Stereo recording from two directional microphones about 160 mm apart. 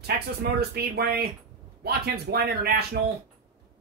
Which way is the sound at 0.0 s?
90° right.